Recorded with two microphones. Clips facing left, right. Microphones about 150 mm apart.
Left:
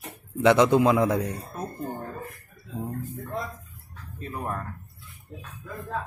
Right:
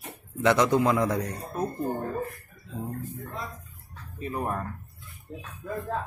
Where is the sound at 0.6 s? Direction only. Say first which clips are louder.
Left 3 dB; 20° left (ahead or behind).